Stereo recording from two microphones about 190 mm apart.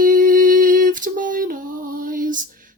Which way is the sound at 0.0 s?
45° right (ahead or behind).